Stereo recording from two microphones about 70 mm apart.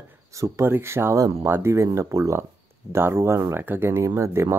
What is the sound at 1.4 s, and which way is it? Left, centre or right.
Speech, right.